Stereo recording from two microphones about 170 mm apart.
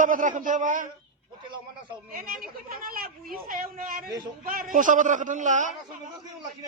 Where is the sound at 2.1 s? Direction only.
55° right (ahead or behind).